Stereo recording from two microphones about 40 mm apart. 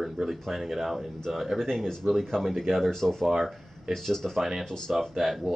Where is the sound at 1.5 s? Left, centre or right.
Centre.